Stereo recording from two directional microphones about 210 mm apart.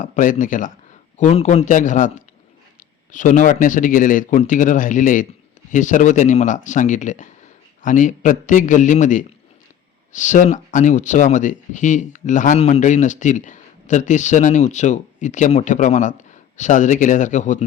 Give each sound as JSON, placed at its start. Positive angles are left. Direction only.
{"t": 0.0, "sound": "speech", "side_deg": 35}